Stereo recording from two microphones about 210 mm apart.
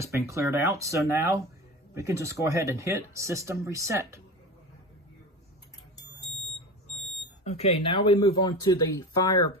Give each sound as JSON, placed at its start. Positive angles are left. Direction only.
{"t": 0.0, "sound": "speech", "side_deg": -15}
{"t": 7.4, "sound": "speech", "side_deg": 30}